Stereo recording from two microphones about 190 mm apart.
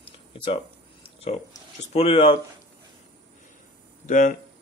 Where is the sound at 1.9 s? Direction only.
30° left (ahead or behind).